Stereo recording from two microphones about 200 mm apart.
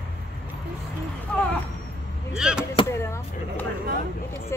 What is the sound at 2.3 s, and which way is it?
Chop, 5° right (ahead or behind).